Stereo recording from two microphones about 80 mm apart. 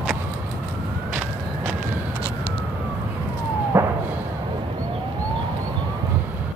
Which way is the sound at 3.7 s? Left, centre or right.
Right.